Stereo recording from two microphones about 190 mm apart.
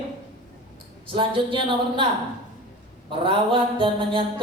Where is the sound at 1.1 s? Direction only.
25° right (ahead or behind).